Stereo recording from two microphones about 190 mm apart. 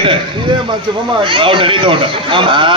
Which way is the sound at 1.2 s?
25° right (ahead or behind).